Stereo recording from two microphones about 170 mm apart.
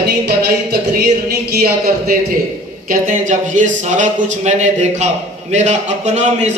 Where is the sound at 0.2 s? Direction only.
70° right (ahead or behind).